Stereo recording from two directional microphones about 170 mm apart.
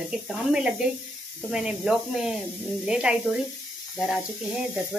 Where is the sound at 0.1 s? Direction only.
5° right (ahead or behind).